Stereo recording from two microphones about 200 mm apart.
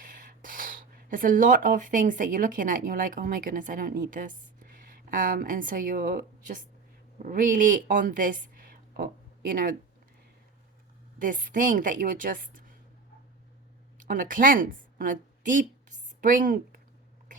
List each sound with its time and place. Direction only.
0.1 s a woman's voice: 40° right (ahead or behind)
11.2 s a woman's voice: 40° right (ahead or behind)
14.0 s speech: 40° right (ahead or behind)